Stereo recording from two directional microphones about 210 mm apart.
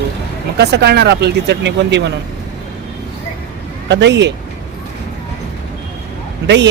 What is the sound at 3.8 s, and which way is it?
Speech, 60° right (ahead or behind).